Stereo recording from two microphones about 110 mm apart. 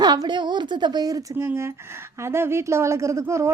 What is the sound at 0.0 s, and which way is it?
A woman's voice, 40° right (ahead or behind).